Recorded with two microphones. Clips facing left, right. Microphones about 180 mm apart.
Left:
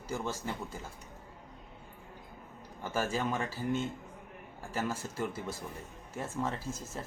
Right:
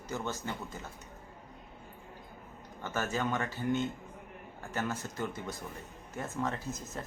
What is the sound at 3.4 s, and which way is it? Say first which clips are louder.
Speech: right 1 dB; 30° left (ahead or behind).